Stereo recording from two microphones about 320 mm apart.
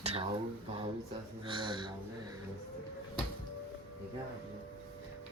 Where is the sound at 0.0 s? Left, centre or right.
Centre.